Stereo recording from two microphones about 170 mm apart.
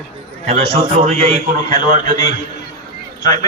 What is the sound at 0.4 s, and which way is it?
A man's voice, 35° right (ahead or behind).